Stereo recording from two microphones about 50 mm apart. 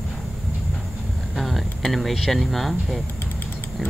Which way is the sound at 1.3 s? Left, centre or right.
Centre.